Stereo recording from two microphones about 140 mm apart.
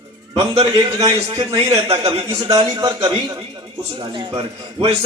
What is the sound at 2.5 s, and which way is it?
Speech, 25° right (ahead or behind).